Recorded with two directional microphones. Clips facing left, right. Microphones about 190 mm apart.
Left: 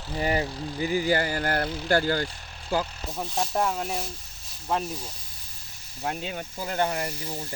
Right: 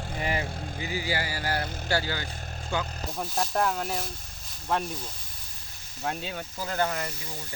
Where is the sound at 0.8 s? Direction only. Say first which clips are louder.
Left 8 dB; 45° left (ahead or behind).